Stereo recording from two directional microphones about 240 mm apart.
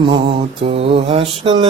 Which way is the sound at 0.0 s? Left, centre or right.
Right.